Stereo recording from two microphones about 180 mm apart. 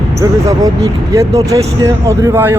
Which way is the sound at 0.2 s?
20° right (ahead or behind).